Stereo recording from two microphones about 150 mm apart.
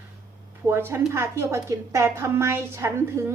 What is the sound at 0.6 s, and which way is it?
A woman's voice, 15° right (ahead or behind).